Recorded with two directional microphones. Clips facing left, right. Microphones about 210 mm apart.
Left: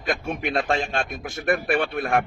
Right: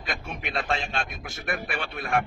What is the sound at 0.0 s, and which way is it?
A man's voice, 50° left (ahead or behind).